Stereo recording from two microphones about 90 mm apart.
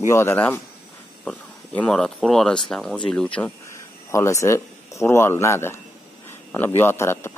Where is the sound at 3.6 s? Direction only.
35° left (ahead or behind).